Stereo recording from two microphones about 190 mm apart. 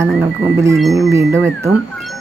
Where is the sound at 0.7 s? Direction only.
Centre (ahead or behind).